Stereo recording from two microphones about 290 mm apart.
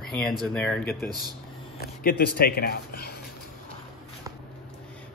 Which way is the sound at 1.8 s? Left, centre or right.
Left.